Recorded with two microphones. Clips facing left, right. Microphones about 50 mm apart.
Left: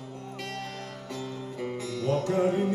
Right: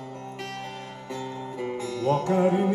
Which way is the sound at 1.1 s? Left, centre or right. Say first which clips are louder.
Right 4 dB; right.